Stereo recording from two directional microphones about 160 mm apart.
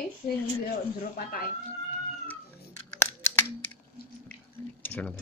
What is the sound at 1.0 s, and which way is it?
Speech, 65° left (ahead or behind).